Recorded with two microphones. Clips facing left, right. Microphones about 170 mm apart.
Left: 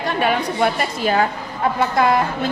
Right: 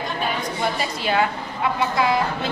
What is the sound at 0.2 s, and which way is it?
Speech, 60° left (ahead or behind).